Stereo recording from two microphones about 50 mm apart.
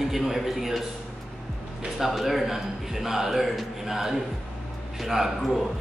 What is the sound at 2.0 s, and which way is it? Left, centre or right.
Speech, centre.